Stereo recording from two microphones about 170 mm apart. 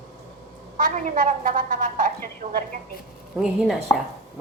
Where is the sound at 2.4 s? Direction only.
40° right (ahead or behind).